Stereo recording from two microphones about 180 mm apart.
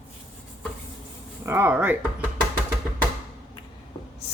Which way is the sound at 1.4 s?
15° right (ahead or behind).